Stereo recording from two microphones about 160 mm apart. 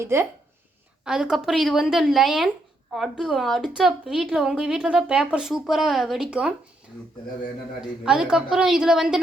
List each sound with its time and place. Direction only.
0.0 s speech: 15° right (ahead or behind)
1.0 s a woman's voice: 5° right (ahead or behind)
7.8 s a woman's voice: 5° right (ahead or behind)